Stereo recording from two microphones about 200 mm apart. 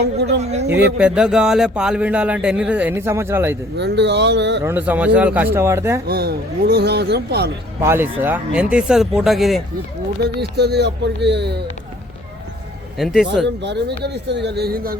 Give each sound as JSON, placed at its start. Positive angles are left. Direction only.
{"t": 0.0, "sound": "speech", "side_deg": -55}
{"t": 0.9, "sound": "speech", "side_deg": -5}
{"t": 3.8, "sound": "speech", "side_deg": -60}
{"t": 4.6, "sound": "speech", "side_deg": -10}
{"t": 6.1, "sound": "speech", "side_deg": -50}
{"t": 7.8, "sound": "speech", "side_deg": -10}
{"t": 10.2, "sound": "speech", "side_deg": -55}
{"t": 13.0, "sound": "speech", "side_deg": 0}
{"t": 13.6, "sound": "speech", "side_deg": -60}